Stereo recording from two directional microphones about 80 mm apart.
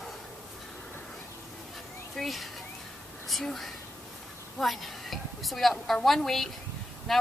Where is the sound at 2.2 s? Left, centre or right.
Centre.